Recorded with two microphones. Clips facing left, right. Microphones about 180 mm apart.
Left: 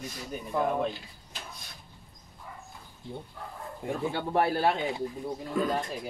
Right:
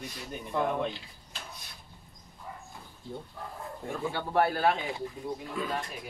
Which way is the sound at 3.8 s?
20° left (ahead or behind).